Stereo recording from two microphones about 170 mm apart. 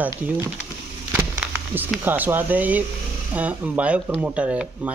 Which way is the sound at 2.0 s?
10° right (ahead or behind).